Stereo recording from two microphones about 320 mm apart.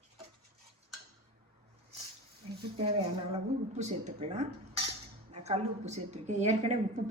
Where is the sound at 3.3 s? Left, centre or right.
Right.